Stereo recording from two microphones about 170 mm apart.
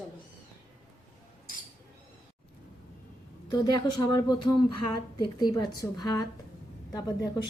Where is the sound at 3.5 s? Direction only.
25° left (ahead or behind).